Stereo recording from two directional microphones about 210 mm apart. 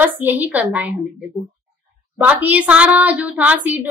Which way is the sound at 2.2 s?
5° right (ahead or behind).